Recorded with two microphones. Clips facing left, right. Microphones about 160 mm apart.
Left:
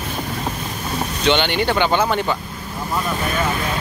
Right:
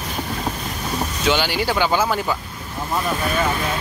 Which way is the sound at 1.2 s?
5° right (ahead or behind).